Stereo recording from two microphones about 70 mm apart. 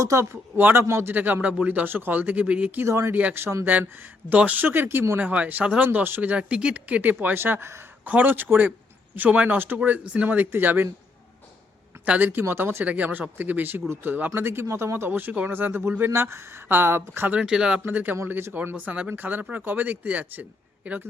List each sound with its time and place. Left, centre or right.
0.0 s speech: right
1.1 s a man's voice: right
2.8 s speech: right
3.1 s a man's voice: right
3.3 s speech: right
4.3 s a man's voice: right
6.3 s a man's voice: centre; by 7.8 s right
8.0 s a man's voice: right
12.0 s a man's voice: centre
12.3 s a man's voice: right
17.3 s speech: centre
17.8 s a man's voice: right